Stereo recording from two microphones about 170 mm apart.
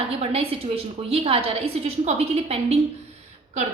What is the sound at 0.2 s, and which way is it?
A woman's voice, 35° right (ahead or behind).